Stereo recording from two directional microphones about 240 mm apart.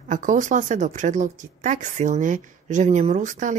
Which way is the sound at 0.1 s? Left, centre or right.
Right.